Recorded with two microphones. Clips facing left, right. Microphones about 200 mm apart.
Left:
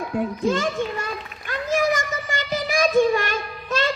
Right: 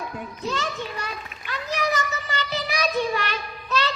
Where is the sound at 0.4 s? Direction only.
50° left (ahead or behind).